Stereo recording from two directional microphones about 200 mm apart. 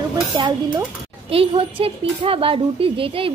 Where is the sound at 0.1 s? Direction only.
20° right (ahead or behind).